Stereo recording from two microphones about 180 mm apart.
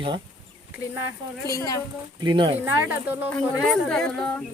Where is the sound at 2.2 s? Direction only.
25° right (ahead or behind).